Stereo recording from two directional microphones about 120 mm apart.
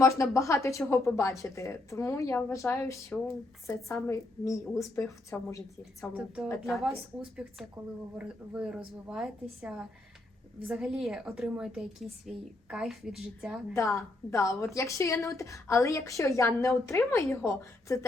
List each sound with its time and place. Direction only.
0.0 s a woman's voice: 25° left (ahead or behind)
6.1 s a woman's voice: 10° right (ahead or behind)
7.8 s speech: 25° right (ahead or behind)
8.2 s a woman's voice: 10° right (ahead or behind)
13.7 s a woman's voice: 25° left (ahead or behind)